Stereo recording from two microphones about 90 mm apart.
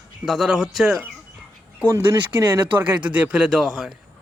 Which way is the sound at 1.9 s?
35° right (ahead or behind).